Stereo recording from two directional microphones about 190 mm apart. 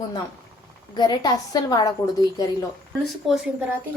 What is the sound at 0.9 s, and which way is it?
A woman's voice, 20° left (ahead or behind).